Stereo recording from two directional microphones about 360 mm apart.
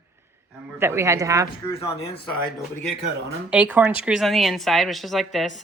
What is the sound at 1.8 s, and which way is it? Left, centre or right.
Speech, centre.